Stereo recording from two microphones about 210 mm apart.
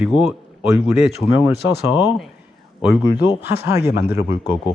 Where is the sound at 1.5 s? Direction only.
50° left (ahead or behind).